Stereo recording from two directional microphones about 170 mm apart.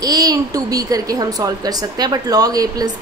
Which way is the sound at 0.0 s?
20° right (ahead or behind).